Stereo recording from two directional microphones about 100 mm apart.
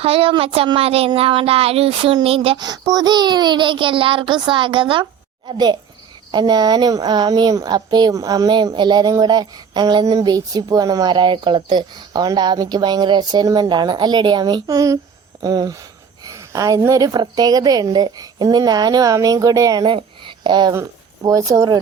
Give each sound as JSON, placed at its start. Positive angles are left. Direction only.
{"t": 0.0, "sound": "speech", "side_deg": -70}
{"t": 2.6, "sound": "speech", "side_deg": -40}
{"t": 6.3, "sound": "speech", "side_deg": -45}
{"t": 21.2, "sound": "speech", "side_deg": -35}